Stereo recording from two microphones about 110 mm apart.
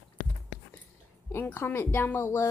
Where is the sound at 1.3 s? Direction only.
20° left (ahead or behind).